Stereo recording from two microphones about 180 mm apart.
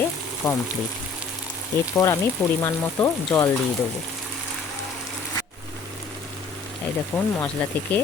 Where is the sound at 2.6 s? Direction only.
20° left (ahead or behind).